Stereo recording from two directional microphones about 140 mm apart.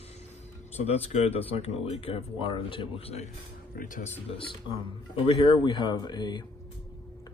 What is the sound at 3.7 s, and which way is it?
Speech, 70° left (ahead or behind).